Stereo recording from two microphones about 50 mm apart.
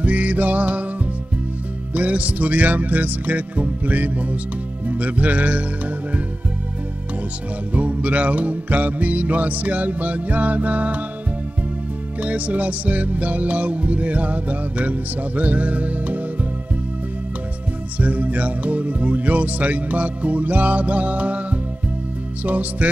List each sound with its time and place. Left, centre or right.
0.0 s music: right
2.0 s music: right
7.7 s music: right
12.2 s music: right
17.9 s speech: right
22.4 s music: right